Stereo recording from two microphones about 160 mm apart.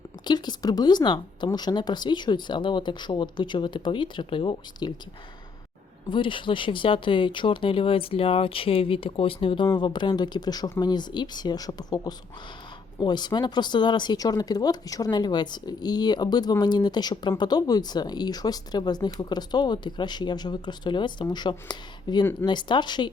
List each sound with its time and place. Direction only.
0.3 s speech: 25° left (ahead or behind)
6.1 s speech: 30° left (ahead or behind)